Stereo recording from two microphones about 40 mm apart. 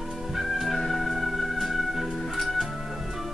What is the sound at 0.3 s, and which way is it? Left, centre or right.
Music, centre.